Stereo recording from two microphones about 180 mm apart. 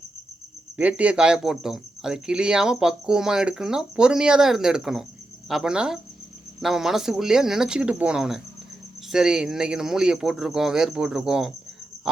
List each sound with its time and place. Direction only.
0.8 s speech: 5° right (ahead or behind)